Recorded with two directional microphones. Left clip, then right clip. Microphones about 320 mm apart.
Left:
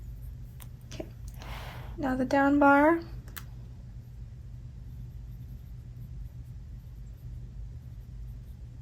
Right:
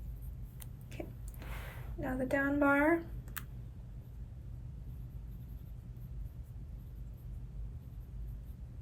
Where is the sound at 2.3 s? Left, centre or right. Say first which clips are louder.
Left 8 dB; centre.